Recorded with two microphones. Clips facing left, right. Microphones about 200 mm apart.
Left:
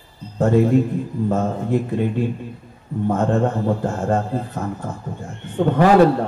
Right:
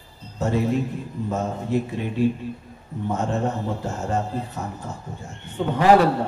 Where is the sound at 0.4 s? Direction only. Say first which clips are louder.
Left 7 dB; 55° left (ahead or behind).